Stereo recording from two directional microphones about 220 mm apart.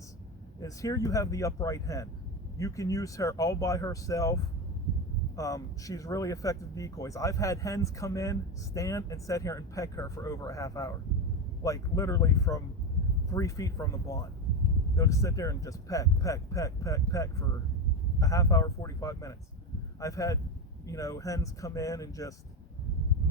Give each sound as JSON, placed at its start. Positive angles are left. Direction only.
{"t": 0.6, "sound": "speech", "side_deg": 15}
{"t": 5.4, "sound": "speech", "side_deg": 15}